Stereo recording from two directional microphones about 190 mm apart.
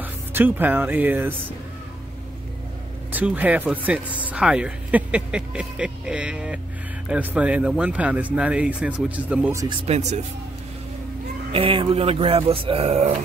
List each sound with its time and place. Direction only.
0.0 s speech: 10° right (ahead or behind)
3.1 s speech: 10° right (ahead or behind)
9.8 s speech: 35° right (ahead or behind)
11.5 s speech: 30° right (ahead or behind)